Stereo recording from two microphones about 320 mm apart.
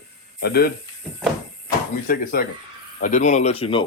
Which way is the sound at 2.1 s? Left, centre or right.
Left.